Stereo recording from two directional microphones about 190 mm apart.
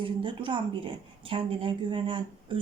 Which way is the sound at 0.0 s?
25° right (ahead or behind).